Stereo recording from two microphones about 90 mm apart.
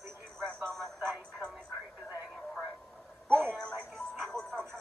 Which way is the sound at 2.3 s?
Centre (ahead or behind).